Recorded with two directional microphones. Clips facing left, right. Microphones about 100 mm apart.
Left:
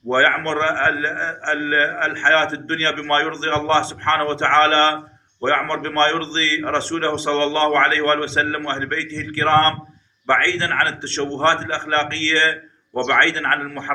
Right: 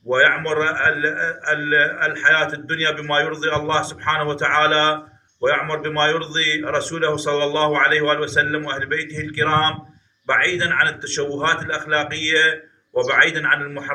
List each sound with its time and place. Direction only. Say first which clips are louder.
0.2 s a man's voice: even; 15° right (ahead or behind)